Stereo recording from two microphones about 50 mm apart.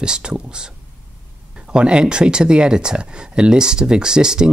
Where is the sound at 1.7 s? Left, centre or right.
Centre.